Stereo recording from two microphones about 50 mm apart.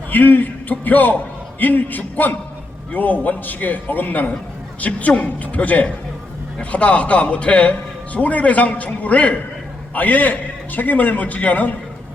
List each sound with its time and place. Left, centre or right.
0.1 s a man's voice: left